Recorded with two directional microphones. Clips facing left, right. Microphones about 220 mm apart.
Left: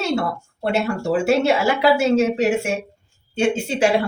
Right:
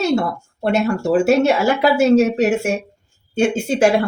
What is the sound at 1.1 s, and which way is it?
Speech, 40° right (ahead or behind).